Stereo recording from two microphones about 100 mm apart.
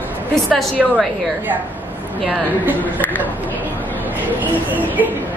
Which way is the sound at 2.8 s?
15° left (ahead or behind).